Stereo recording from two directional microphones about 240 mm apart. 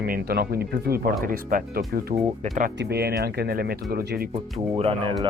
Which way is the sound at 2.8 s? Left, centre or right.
Right.